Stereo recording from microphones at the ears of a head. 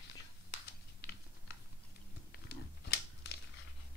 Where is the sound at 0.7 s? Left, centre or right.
Left.